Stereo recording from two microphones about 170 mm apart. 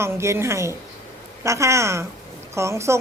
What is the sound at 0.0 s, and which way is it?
A woman's voice, 15° right (ahead or behind).